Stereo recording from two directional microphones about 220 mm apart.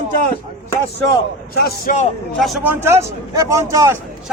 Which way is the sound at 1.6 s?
45° left (ahead or behind).